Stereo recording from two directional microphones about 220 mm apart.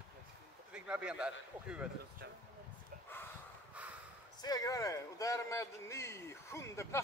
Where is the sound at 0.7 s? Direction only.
5° right (ahead or behind).